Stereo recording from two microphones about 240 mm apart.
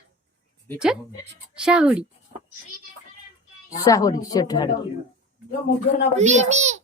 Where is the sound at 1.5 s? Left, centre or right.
Centre.